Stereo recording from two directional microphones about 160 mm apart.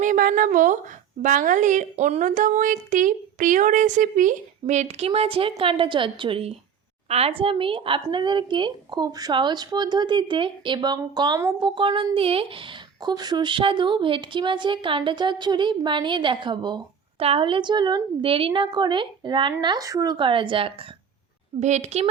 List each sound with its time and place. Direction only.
0.0 s a woman's voice: 60° right (ahead or behind); by 22.0 s 40° right (ahead or behind)